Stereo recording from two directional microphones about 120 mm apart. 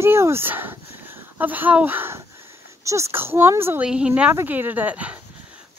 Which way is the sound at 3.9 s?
10° right (ahead or behind).